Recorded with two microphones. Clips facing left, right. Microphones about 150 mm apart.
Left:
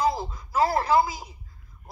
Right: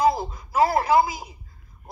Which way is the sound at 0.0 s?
15° right (ahead or behind).